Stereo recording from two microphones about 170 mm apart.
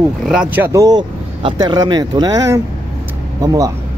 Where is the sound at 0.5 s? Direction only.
15° right (ahead or behind).